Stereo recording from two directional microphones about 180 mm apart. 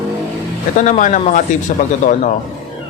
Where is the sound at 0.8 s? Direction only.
45° left (ahead or behind).